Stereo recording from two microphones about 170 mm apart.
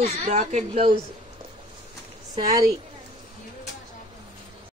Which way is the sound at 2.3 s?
25° right (ahead or behind).